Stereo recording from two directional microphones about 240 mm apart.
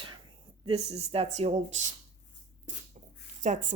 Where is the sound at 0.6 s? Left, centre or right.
Right.